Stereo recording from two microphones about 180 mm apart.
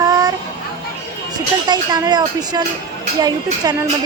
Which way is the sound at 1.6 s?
25° right (ahead or behind).